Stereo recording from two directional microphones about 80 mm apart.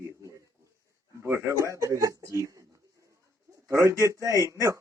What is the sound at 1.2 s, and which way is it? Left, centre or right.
A man's voice, right.